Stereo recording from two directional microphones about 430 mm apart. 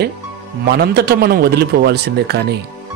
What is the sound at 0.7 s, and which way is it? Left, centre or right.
Speech, right.